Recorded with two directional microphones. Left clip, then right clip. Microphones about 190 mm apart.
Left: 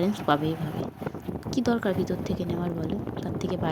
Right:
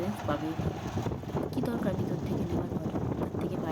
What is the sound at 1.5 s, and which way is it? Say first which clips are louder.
Speech: left 9 dB; 35° left (ahead or behind).